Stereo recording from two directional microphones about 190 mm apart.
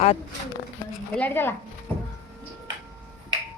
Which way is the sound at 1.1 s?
10° left (ahead or behind).